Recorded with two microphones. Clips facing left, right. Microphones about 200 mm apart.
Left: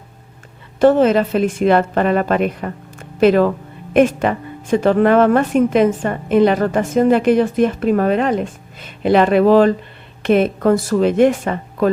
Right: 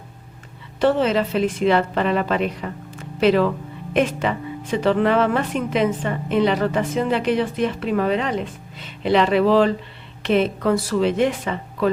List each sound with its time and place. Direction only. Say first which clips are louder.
0.8 s speech: left 6 dB; 50° left (ahead or behind)